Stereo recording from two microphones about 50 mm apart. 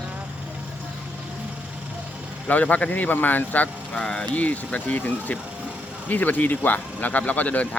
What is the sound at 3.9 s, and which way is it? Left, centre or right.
Speech, centre.